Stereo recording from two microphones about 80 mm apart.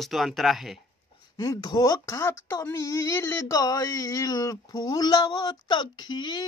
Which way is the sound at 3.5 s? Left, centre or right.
Left.